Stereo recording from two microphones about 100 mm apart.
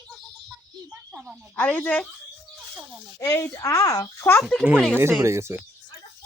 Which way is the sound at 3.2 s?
30° left (ahead or behind).